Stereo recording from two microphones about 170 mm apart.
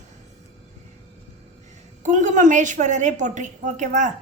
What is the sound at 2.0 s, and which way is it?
A woman's voice, 45° right (ahead or behind).